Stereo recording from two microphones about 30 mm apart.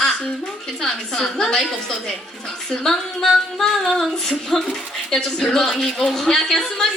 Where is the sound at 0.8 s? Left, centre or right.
Centre.